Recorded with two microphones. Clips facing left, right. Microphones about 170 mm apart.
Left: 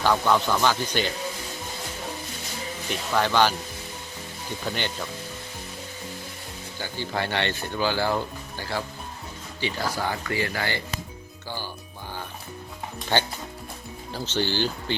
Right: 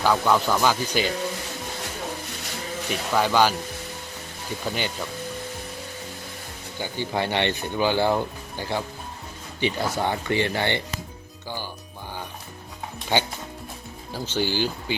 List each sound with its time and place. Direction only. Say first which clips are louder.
0.0 s speech: right 1 dB; 5° right (ahead or behind)
3.2 s speech: right 1 dB; 10° right (ahead or behind)
4.6 s speech: right 1 dB; 5° right (ahead or behind)
6.7 s speech: right 3 dB; 15° right (ahead or behind)
13.1 s speech: right 1 dB; 15° right (ahead or behind)